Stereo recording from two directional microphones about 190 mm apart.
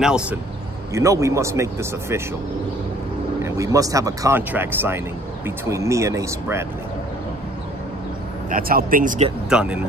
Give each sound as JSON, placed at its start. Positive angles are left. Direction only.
{"t": 0.0, "sound": "speech", "side_deg": -5}
{"t": 0.9, "sound": "speech", "side_deg": -15}
{"t": 3.4, "sound": "speech", "side_deg": -15}
{"t": 8.5, "sound": "speech", "side_deg": -50}
{"t": 9.5, "sound": "speech", "side_deg": -5}